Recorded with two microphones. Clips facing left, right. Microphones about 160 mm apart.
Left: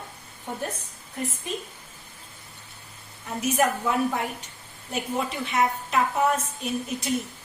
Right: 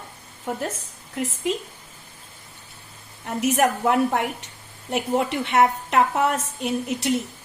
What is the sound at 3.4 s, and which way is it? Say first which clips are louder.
A woman's voice: right 3 dB; 75° right (ahead or behind).